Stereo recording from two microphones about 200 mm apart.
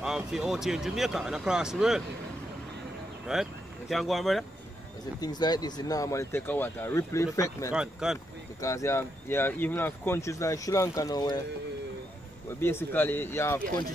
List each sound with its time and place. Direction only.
0.0 s speech: 5° right (ahead or behind)
3.3 s speech: centre (ahead or behind)
5.2 s speech: 20° left (ahead or behind)
7.7 s speech: 5° right (ahead or behind)
8.5 s speech: 15° left (ahead or behind)
12.5 s speech: 10° left (ahead or behind)